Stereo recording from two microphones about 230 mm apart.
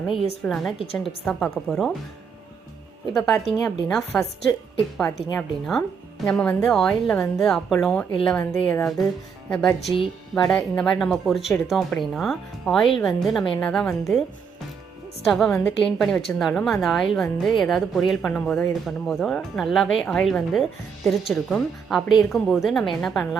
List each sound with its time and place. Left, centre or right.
0.4 s speech: centre
3.1 s speech: centre
15.3 s speech: centre